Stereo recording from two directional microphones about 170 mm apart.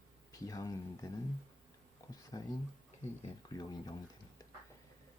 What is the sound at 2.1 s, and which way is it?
Speech, 20° left (ahead or behind).